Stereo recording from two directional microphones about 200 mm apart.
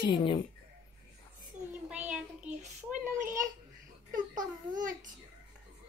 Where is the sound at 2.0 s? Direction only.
5° right (ahead or behind).